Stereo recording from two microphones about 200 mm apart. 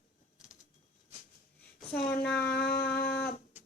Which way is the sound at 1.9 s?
50° left (ahead or behind).